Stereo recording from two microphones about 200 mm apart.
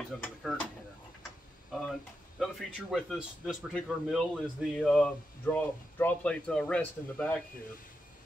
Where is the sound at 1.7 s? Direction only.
Centre (ahead or behind).